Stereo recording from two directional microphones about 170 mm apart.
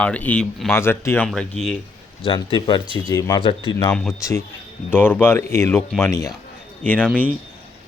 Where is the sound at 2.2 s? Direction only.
30° left (ahead or behind).